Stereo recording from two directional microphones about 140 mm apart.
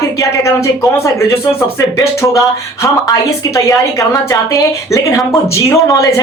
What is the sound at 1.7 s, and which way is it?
A woman's voice, 20° left (ahead or behind).